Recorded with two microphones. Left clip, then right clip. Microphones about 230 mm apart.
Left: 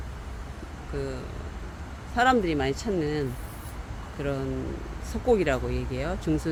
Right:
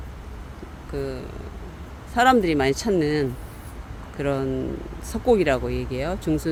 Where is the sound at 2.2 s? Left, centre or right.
Right.